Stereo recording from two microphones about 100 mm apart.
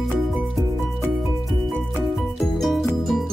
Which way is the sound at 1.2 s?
Centre (ahead or behind).